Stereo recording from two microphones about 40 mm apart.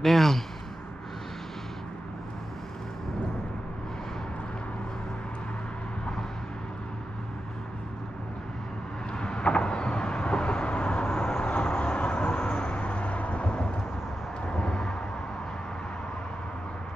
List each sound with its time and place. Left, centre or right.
0.0 s a man's voice: centre
9.2 s vehicle: left